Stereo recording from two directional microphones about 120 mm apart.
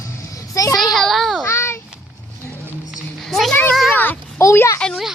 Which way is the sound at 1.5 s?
20° left (ahead or behind).